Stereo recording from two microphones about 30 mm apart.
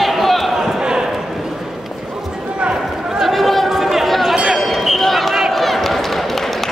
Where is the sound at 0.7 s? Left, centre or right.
Right.